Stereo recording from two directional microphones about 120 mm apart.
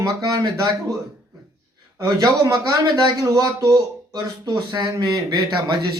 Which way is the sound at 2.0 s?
30° right (ahead or behind).